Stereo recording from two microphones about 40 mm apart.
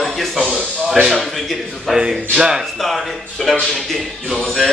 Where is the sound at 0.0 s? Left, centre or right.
Centre.